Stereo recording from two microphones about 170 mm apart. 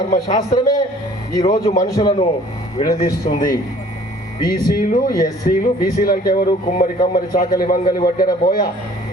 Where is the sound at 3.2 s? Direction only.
50° left (ahead or behind).